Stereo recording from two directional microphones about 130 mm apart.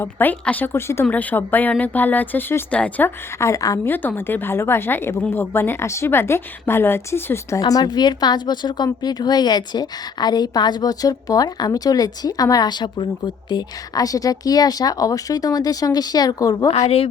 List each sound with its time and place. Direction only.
0.0 s speech: 15° left (ahead or behind)
3.3 s speech: 25° left (ahead or behind)
3.9 s speech: 15° left (ahead or behind)
7.6 s speech: 30° left (ahead or behind)
16.7 s a woman's voice: 55° left (ahead or behind)